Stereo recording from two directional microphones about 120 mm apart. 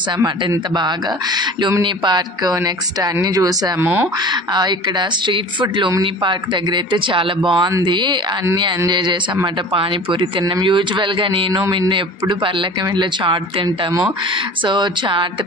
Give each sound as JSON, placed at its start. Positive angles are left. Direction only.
{"t": 0.2, "sound": "speech", "side_deg": -35}
{"t": 3.8, "sound": "speech", "side_deg": -15}
{"t": 4.3, "sound": "speech", "side_deg": -35}